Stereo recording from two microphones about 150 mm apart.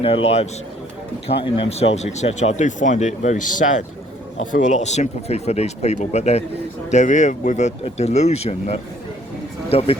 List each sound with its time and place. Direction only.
0.0 s a man's voice: 40° left (ahead or behind)
1.5 s speech: 40° left (ahead or behind)